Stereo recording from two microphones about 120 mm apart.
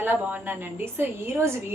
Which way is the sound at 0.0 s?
15° right (ahead or behind).